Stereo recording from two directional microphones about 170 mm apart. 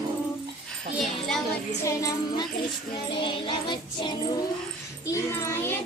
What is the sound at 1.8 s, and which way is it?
Music, 20° left (ahead or behind).